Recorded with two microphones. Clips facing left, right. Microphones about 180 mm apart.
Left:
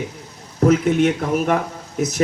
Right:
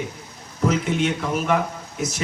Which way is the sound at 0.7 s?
50° left (ahead or behind).